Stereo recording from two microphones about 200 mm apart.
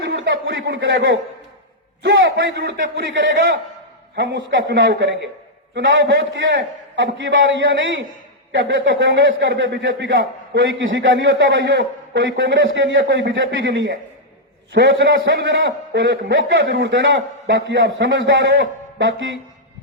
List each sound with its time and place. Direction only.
0.1 s a man's voice: 65° right (ahead or behind)
10.2 s a man's voice: 60° right (ahead or behind)